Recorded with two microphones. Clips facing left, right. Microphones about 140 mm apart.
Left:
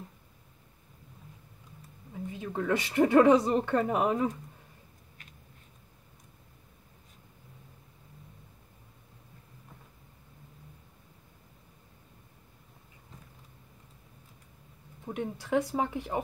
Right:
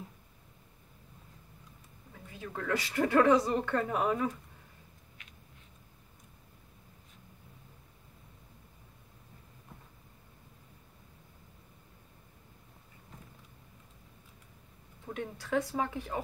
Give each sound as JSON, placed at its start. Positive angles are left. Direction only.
{"t": 2.2, "sound": "speech", "side_deg": 20}
{"t": 15.0, "sound": "speech", "side_deg": 15}